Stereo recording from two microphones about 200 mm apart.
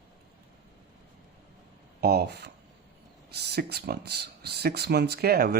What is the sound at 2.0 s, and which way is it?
A man's voice, 50° right (ahead or behind).